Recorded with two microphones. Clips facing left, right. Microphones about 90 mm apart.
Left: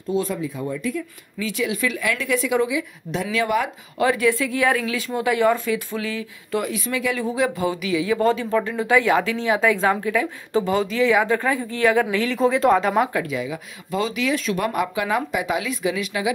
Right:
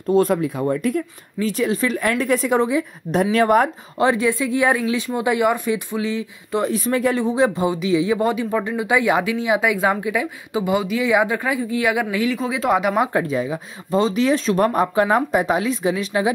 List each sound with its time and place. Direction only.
0.1 s speech: 60° right (ahead or behind)
1.4 s speech: 40° right (ahead or behind)
4.0 s speech: 25° right (ahead or behind)
6.7 s speech: 40° right (ahead or behind)
7.2 s speech: 25° right (ahead or behind); by 13.1 s 10° right (ahead or behind)
13.1 s speech: 35° right (ahead or behind)